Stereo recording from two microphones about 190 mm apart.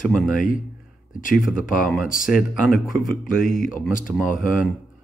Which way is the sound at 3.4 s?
45° left (ahead or behind).